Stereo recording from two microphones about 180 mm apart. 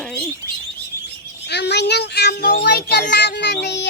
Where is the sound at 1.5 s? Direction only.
70° left (ahead or behind).